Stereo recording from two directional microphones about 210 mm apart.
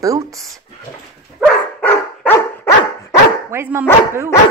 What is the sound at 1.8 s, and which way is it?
Dog, 10° left (ahead or behind).